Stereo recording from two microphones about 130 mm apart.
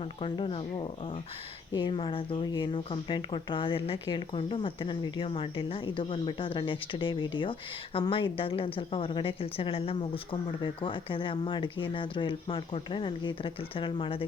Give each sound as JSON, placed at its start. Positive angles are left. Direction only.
{"t": 0.0, "sound": "a woman's voice", "side_deg": 45}